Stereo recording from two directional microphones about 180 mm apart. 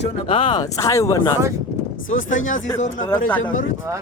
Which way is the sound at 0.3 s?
30° left (ahead or behind).